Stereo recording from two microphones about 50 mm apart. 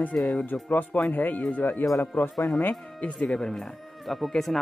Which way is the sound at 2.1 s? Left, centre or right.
Left.